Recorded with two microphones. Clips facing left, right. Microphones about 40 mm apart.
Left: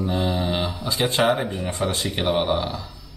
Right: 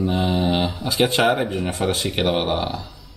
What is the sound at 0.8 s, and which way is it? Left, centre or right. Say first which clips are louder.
Speech: right 2 dB; right.